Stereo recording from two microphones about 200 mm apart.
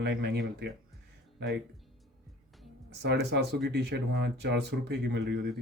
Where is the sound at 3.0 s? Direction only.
60° right (ahead or behind).